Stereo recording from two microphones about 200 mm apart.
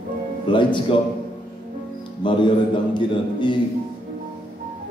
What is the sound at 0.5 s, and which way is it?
Speech, 25° left (ahead or behind).